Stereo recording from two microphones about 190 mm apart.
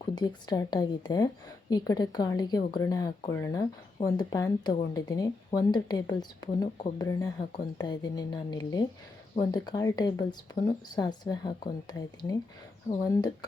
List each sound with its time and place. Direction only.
0.0 s speech: 20° left (ahead or behind)